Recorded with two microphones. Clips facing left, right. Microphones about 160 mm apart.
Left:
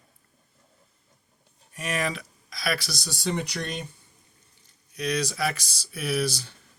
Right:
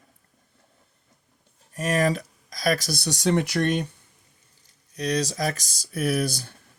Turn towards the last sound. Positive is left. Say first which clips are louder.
# right 2 dB
turn(degrees=-50)  # may be behind; listen again after turning